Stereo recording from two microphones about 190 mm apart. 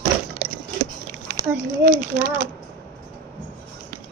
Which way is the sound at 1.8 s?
45° right (ahead or behind).